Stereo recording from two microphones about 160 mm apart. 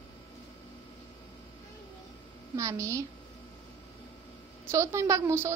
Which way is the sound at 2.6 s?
20° right (ahead or behind).